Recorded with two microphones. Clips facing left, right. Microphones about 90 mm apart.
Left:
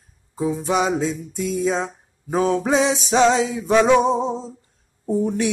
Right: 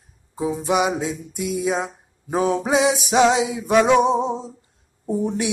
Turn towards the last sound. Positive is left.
turn(degrees=-20)  # may be behind; listen again after turning